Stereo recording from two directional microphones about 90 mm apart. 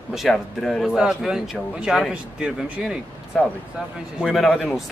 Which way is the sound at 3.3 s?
Centre (ahead or behind).